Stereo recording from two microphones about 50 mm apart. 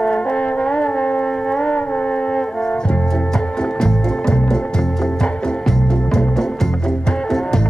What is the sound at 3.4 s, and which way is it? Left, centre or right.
Music, centre.